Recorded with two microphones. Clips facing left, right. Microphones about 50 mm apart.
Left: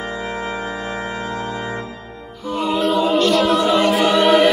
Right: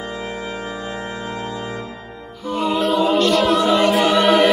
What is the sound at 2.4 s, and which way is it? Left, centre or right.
A capella, centre.